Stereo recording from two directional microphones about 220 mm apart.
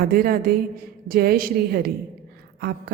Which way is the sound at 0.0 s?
40° right (ahead or behind).